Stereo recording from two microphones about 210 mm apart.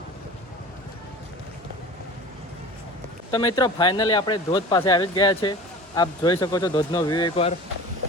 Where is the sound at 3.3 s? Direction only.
20° left (ahead or behind).